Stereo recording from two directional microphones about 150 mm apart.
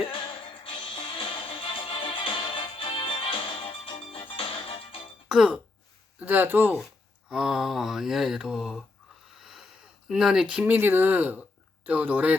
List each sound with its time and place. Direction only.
0.1 s music: 35° left (ahead or behind)
5.3 s speech: 5° right (ahead or behind)
9.4 s a sound: 5° right (ahead or behind)
10.1 s speech: 5° right (ahead or behind)